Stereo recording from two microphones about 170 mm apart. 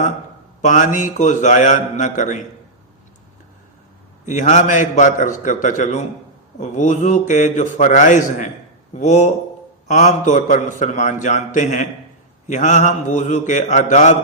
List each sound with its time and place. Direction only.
0.6 s a man's voice: 50° left (ahead or behind)
4.3 s a man's voice: 45° left (ahead or behind)